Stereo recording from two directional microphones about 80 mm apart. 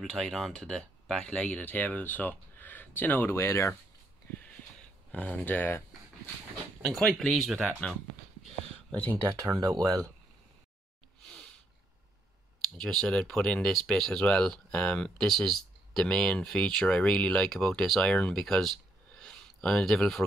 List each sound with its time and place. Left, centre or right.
0.0 s speech: centre
1.2 s speech: centre; by 3.7 s left
5.1 s speech: centre
6.8 s speech: centre
9.3 s speech: right
11.2 s sneeze: centre
12.6 s speech: centre
19.1 s a sound: centre